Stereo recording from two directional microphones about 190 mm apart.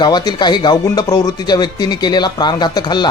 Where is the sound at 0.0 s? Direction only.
25° left (ahead or behind).